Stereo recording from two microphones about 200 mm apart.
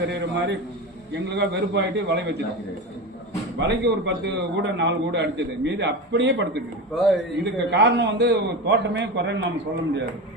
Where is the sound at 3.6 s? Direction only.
60° right (ahead or behind).